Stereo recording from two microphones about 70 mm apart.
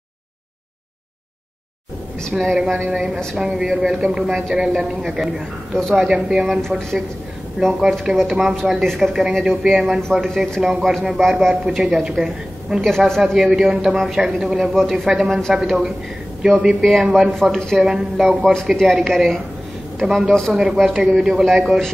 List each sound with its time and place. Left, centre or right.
2.3 s a man's voice: centre
6.1 s a woman's voice: centre
8.2 s a man's voice: centre
12.8 s a man's voice: centre
15.2 s a man's voice: centre
15.5 s a woman's voice: centre
18.4 s a man's voice: centre